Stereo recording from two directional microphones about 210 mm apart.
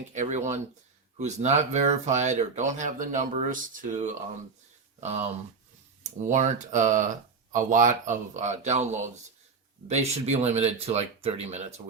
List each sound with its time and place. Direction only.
0.1 s speech: 35° right (ahead or behind)